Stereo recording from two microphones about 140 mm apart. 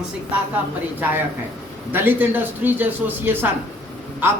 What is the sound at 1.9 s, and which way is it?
Speech, 15° right (ahead or behind).